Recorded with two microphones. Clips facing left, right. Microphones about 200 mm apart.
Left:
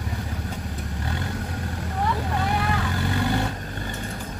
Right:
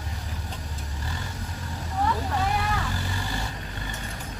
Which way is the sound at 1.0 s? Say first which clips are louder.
Left 7 dB; 65° left (ahead or behind).